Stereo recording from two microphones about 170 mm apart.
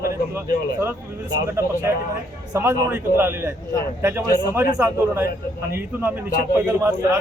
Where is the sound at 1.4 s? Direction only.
15° right (ahead or behind).